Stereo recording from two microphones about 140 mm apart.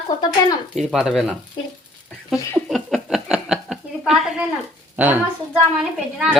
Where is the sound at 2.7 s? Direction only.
Centre (ahead or behind).